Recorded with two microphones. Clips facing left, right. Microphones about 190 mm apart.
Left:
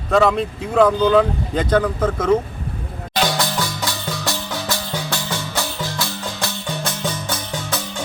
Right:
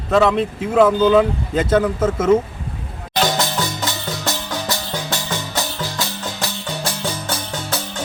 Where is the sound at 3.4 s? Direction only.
20° right (ahead or behind).